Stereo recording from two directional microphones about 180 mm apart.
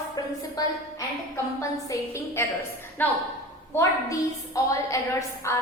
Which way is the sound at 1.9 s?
15° left (ahead or behind).